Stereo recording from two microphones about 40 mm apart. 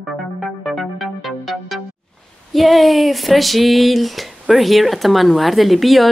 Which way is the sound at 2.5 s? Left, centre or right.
Centre.